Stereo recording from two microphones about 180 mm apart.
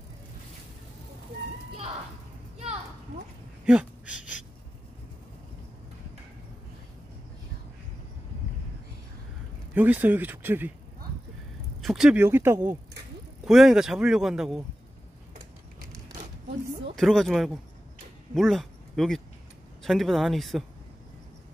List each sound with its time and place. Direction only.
3.6 s a sound: 5° right (ahead or behind)
9.8 s speech: 10° right (ahead or behind)
11.8 s speech: centre (ahead or behind)
16.9 s speech: centre (ahead or behind)